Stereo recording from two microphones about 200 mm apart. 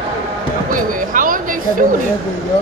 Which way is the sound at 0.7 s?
40° right (ahead or behind).